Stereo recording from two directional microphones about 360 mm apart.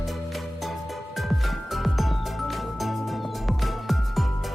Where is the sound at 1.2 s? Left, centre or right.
Centre.